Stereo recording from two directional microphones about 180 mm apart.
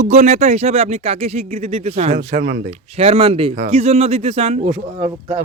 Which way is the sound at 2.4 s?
70° right (ahead or behind).